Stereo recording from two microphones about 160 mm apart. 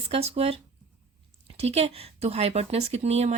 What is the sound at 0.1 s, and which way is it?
Speech, 40° right (ahead or behind).